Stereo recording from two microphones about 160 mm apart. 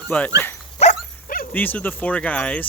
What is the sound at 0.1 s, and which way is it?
Speech, 10° left (ahead or behind).